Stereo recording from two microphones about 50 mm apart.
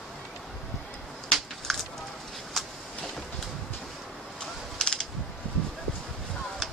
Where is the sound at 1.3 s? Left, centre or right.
Centre.